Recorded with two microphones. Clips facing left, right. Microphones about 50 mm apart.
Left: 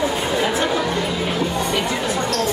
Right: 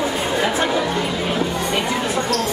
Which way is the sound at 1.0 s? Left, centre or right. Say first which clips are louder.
Even; right.